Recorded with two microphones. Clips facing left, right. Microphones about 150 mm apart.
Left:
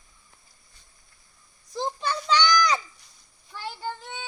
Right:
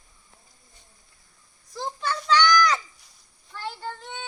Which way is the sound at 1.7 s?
20° left (ahead or behind).